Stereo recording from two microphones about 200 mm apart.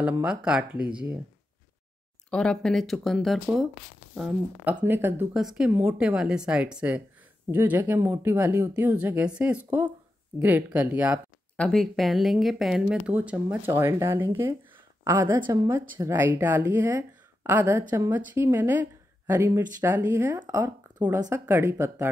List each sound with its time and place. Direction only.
0.2 s speech: 5° right (ahead or behind)
2.3 s speech: 5° left (ahead or behind)
11.5 s speech: 5° left (ahead or behind); by 22.1 s 15° right (ahead or behind)